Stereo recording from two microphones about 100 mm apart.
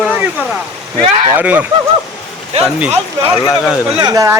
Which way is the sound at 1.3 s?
15° right (ahead or behind).